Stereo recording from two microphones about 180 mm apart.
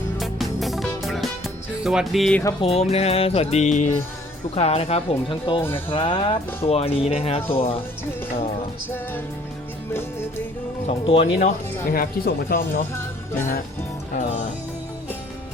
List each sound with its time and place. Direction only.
0.2 s music: centre (ahead or behind)
2.6 s speech: 35° left (ahead or behind)
9.9 s music: 15° left (ahead or behind)
10.8 s speech: 30° left (ahead or behind)
11.3 s speech: 45° left (ahead or behind)
12.9 s music: 15° left (ahead or behind)
14.1 s speech: 45° left (ahead or behind)